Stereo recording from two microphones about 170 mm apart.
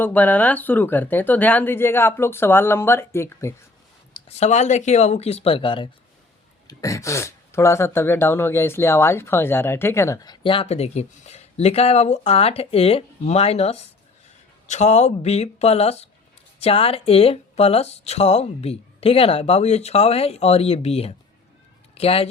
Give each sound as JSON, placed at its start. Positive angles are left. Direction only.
{"t": 0.0, "sound": "speech", "side_deg": 10}
{"t": 4.1, "sound": "speech", "side_deg": 40}
{"t": 6.7, "sound": "speech", "side_deg": 20}